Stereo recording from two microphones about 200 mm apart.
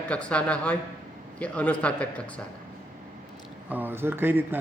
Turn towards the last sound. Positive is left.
turn(degrees=-10)  # may be behind; listen again after turning